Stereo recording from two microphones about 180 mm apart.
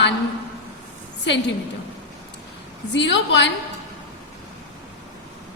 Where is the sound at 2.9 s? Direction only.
80° left.